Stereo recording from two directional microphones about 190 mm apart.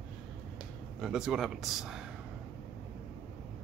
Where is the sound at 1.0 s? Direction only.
5° right (ahead or behind).